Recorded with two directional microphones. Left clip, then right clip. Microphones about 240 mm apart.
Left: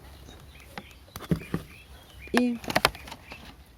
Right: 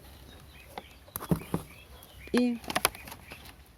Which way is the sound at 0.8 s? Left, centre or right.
Left.